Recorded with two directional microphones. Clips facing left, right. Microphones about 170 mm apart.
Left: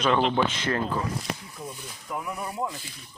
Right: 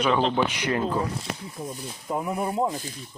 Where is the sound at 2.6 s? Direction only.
50° right (ahead or behind).